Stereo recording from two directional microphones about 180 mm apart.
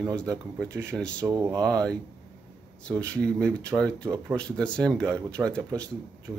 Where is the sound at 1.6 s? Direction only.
5° left (ahead or behind).